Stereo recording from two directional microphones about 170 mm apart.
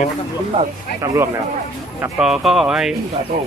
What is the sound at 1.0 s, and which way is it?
Speech, 15° right (ahead or behind).